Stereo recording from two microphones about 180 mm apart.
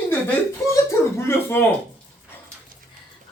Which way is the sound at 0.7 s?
15° left (ahead or behind).